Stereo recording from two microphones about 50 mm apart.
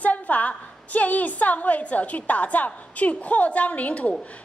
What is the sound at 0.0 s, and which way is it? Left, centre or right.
A woman's voice, left.